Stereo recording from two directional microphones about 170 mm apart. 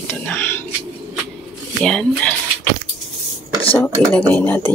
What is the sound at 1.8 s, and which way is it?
Speech, 5° left (ahead or behind).